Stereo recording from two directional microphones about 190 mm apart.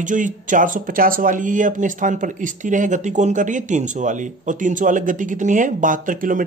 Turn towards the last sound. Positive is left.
turn(degrees=-45)  # may be behind; listen again after turning